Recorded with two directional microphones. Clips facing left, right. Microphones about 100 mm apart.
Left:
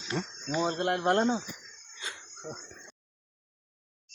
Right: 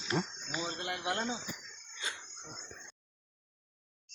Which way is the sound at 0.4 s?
50° left (ahead or behind).